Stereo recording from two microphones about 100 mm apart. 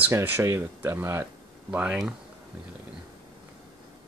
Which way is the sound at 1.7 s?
10° right (ahead or behind).